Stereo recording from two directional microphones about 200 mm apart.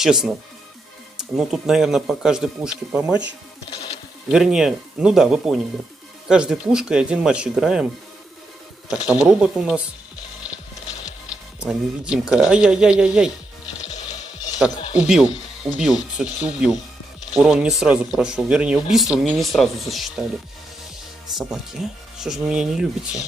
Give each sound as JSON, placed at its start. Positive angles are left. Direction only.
{"t": 0.0, "sound": "speech", "side_deg": 0}
{"t": 1.3, "sound": "speech", "side_deg": 0}
{"t": 4.3, "sound": "speech", "side_deg": -5}
{"t": 8.9, "sound": "speech", "side_deg": -5}
{"t": 11.6, "sound": "speech", "side_deg": -5}
{"t": 13.8, "sound": "music", "side_deg": 35}
{"t": 14.6, "sound": "speech", "side_deg": -5}
{"t": 21.4, "sound": "speech", "side_deg": 0}